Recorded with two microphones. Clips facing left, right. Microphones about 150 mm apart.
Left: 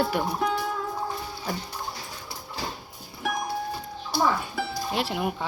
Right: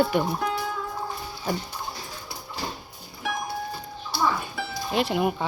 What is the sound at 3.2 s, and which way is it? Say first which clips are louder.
Music: left 1 dB; centre (ahead or behind).